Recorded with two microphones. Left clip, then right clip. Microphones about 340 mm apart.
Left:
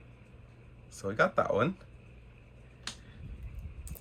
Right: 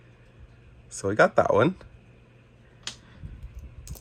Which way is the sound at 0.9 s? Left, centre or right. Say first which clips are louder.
Right 8 dB; centre.